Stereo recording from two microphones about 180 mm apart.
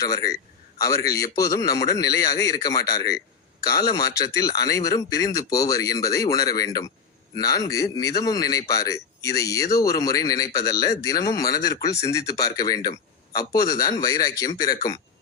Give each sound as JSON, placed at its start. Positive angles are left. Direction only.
{"t": 0.0, "sound": "a man's voice", "side_deg": 20}
{"t": 3.8, "sound": "a man's voice", "side_deg": 20}